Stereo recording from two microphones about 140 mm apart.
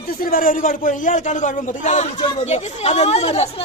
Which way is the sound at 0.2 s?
90° left.